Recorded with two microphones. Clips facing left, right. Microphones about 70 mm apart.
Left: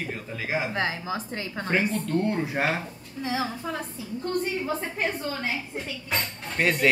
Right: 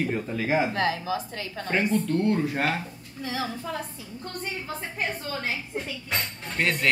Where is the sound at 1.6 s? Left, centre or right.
Centre; by 3.7 s left.